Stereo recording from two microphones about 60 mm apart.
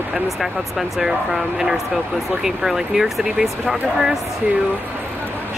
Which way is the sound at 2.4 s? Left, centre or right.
Centre.